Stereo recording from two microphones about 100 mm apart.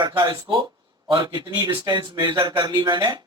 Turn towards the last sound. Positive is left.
turn(degrees=-50)  # may be behind; listen again after turning